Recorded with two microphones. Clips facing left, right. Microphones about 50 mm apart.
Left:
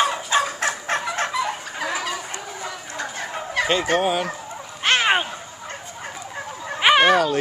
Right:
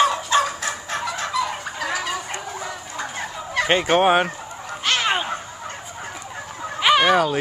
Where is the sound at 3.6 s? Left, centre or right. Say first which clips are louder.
Right 4 dB; right.